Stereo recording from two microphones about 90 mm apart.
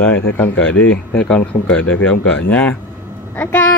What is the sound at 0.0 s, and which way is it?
Speech, 20° left (ahead or behind).